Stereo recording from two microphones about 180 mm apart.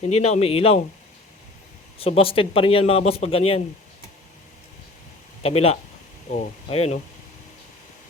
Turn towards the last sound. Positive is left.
turn(degrees=35)  # may be behind; listen again after turning